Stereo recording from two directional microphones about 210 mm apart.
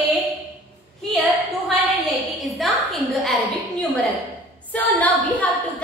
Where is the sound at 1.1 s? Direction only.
Centre (ahead or behind).